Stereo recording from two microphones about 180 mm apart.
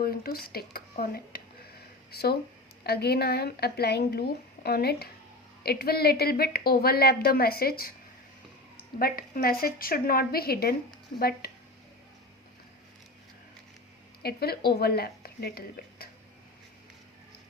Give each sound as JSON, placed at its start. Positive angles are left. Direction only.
{"t": 0.0, "sound": "a woman's voice", "side_deg": 55}
{"t": 9.0, "sound": "a woman's voice", "side_deg": 55}
{"t": 14.2, "sound": "speech", "side_deg": 60}